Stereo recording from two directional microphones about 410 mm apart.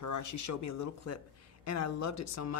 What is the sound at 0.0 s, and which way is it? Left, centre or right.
Speech, left.